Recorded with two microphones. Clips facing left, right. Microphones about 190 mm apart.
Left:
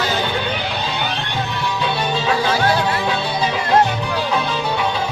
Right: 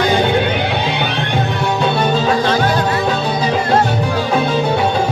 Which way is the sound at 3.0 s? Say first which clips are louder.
Right 4 dB; 45° right (ahead or behind).